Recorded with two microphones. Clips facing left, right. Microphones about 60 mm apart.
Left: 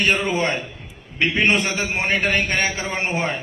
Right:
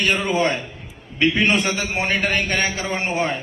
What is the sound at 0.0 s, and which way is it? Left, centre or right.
A man's voice, left.